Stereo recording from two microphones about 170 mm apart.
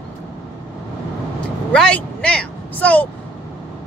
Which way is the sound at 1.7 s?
5° left (ahead or behind).